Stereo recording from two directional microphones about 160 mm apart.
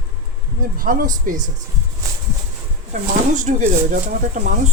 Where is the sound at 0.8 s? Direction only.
60° right (ahead or behind).